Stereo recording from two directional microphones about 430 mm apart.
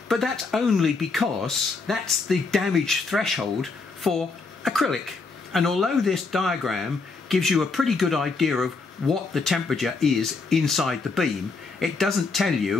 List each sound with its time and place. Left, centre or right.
0.1 s speech: centre